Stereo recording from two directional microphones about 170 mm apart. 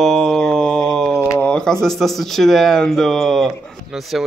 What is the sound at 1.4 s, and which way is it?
Speech, 5° left (ahead or behind).